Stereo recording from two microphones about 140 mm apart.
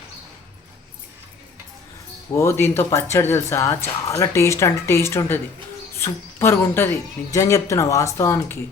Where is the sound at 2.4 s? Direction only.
20° left (ahead or behind).